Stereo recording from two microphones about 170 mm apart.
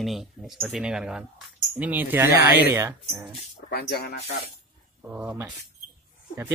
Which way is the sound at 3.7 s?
70° left (ahead or behind).